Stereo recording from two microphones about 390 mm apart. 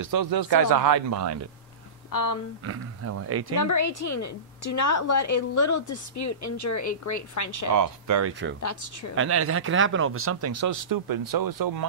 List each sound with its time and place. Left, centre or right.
0.0 s speech: right
2.0 s speech: left
2.6 s speech: right
3.5 s a woman's voice: left
7.7 s speech: right
8.2 s speech: right
8.5 s a woman's voice: left
9.1 s speech: right